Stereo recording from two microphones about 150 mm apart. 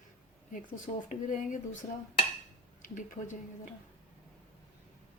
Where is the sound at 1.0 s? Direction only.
60° left (ahead or behind).